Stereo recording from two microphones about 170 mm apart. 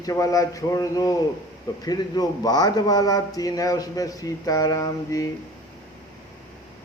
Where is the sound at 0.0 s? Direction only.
20° left (ahead or behind).